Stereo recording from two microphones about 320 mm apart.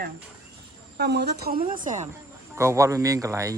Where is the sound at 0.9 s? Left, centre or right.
Right.